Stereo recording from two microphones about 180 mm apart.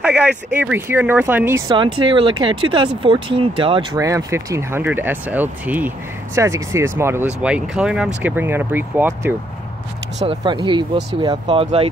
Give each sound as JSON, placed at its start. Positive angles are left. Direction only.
{"t": 0.0, "sound": "speech", "side_deg": -5}
{"t": 1.7, "sound": "speech", "side_deg": -25}
{"t": 10.2, "sound": "speech", "side_deg": -25}